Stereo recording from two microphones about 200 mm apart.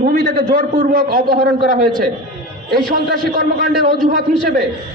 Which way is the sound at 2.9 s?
45° right (ahead or behind).